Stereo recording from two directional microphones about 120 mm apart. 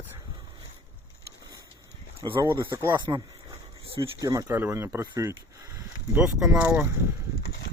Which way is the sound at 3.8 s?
50° right (ahead or behind).